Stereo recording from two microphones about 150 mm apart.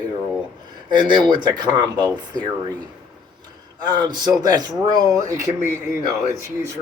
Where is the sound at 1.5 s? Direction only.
30° right (ahead or behind).